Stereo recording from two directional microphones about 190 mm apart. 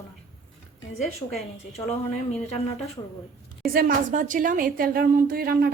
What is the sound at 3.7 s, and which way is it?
A woman's voice, 50° right (ahead or behind).